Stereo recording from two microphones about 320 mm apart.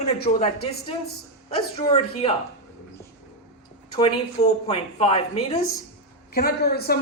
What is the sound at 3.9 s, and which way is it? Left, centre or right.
Speech, centre.